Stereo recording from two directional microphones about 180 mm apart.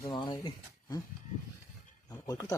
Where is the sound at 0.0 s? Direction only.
25° left (ahead or behind).